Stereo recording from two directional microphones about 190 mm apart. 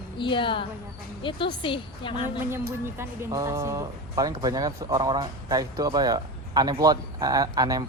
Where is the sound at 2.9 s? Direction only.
15° right (ahead or behind).